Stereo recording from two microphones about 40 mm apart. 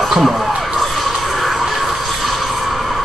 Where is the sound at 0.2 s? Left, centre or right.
Centre.